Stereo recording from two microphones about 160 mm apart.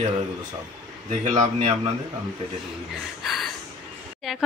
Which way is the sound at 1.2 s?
35° right (ahead or behind).